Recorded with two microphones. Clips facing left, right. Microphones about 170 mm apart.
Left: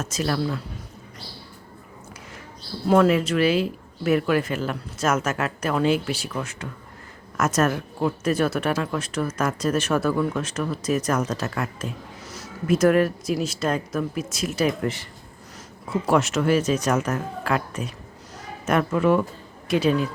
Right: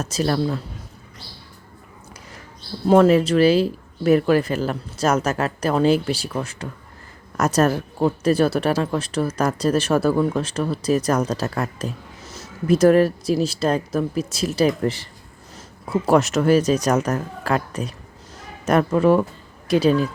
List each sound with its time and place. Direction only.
0.0 s speech: 35° right (ahead or behind)
2.8 s speech: 30° right (ahead or behind)
12.2 s speech: 25° right (ahead or behind)
16.0 s speech: 40° right (ahead or behind)